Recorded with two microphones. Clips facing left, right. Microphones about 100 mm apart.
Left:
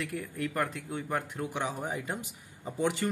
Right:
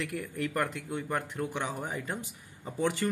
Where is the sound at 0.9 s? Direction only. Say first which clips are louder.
Even; 15° left (ahead or behind).